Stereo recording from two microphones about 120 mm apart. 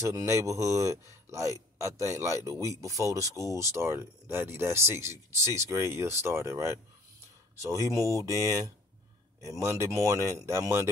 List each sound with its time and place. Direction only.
0.0 s speech: 25° right (ahead or behind)